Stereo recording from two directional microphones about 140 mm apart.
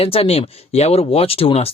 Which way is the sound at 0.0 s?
45° left (ahead or behind).